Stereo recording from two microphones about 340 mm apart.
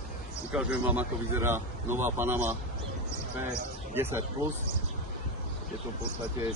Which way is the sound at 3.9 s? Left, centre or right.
Centre.